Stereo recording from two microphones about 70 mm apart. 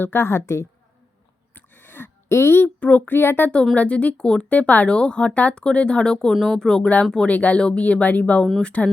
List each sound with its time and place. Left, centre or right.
0.0 s a woman's voice: left
1.5 s a sound: left
2.8 s speech: left
3.8 s speech: centre
6.3 s speech: centre